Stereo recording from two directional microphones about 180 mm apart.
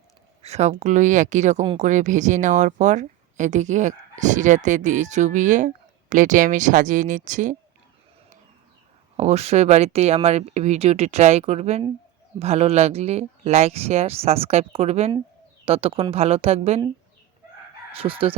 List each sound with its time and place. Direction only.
0.4 s speech: 40° right (ahead or behind)
9.1 s speech: 35° right (ahead or behind)
17.9 s speech: 30° right (ahead or behind)